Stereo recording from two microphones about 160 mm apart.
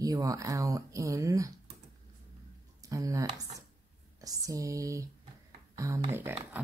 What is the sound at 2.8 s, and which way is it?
Speech, 20° right (ahead or behind).